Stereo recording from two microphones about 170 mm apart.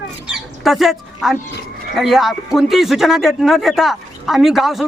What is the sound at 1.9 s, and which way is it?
A man's voice, centre (ahead or behind).